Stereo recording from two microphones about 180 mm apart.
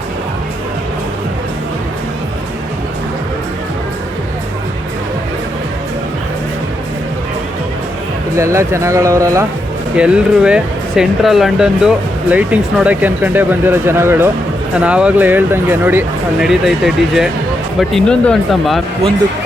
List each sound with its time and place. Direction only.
8.4 s speech: 15° right (ahead or behind)
9.9 s speech: 5° right (ahead or behind)